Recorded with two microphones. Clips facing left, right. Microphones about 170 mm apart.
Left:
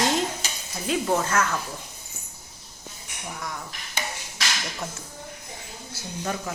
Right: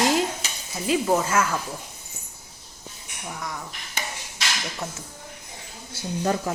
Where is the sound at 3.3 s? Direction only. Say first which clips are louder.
Right 1 dB; centre (ahead or behind).